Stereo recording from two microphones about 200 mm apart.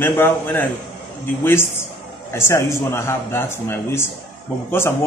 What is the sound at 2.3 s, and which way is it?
Speech, 15° left (ahead or behind).